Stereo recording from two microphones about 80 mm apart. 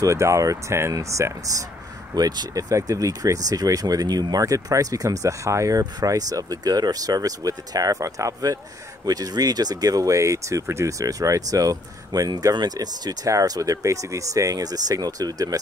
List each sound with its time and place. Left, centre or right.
0.0 s speech: right
2.1 s speech: right